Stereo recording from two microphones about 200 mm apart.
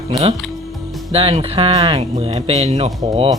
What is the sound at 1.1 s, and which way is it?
Speech, 30° right (ahead or behind).